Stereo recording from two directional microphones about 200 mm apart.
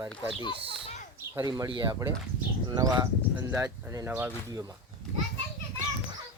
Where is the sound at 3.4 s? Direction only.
10° right (ahead or behind).